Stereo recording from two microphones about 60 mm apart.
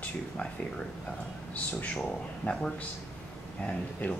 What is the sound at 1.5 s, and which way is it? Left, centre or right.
Speech, left.